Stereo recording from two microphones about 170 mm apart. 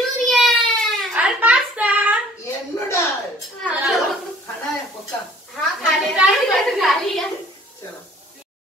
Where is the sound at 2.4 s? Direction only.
15° left (ahead or behind).